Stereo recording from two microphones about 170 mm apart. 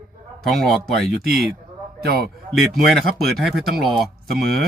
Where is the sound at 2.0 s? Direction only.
65° right (ahead or behind).